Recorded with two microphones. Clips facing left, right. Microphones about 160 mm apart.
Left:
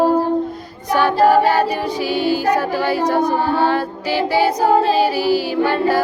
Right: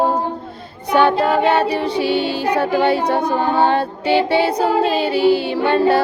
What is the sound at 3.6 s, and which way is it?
Music, 25° right (ahead or behind).